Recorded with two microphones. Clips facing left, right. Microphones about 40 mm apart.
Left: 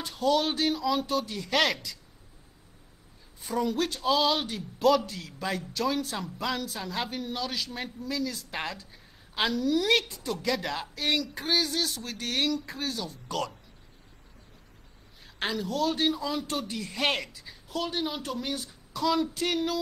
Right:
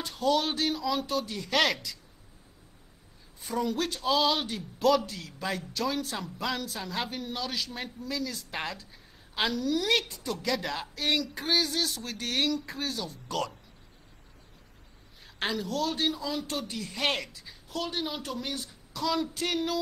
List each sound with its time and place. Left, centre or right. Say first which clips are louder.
0.0 s speech: left 1 dB; centre
3.3 s speech: left 2 dB; centre
15.2 s speech: even; centre